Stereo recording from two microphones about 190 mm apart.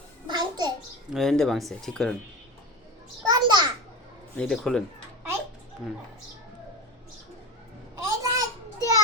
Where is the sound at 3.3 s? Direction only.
25° right (ahead or behind).